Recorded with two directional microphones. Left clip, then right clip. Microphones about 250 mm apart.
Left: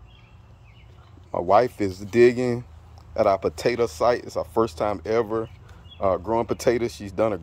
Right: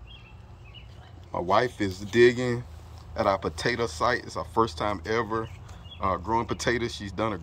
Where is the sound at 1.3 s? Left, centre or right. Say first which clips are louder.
Left 5 dB; centre.